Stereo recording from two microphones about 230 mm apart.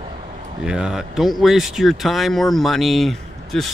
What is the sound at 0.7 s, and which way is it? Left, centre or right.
Speech, centre.